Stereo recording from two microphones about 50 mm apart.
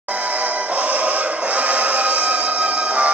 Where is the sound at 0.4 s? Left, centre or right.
Right.